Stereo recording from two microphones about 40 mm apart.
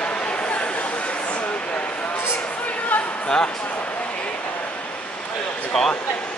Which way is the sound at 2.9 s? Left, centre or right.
Left.